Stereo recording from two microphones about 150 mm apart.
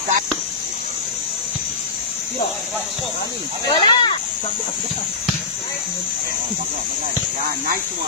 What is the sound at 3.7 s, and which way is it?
Speech, 30° left (ahead or behind).